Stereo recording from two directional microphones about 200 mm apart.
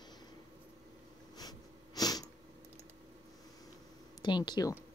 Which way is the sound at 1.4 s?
20° left (ahead or behind).